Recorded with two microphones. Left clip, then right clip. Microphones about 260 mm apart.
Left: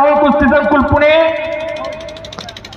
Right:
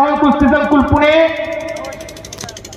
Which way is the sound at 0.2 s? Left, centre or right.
Left.